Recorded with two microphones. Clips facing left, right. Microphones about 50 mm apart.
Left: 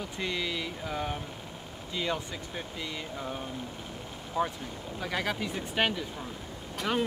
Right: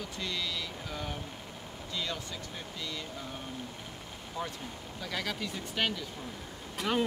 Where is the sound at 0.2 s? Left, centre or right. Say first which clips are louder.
Left 4 dB; left.